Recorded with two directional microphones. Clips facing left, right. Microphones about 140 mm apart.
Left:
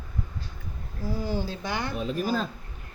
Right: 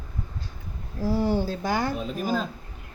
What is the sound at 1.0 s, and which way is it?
Speech, 85° right.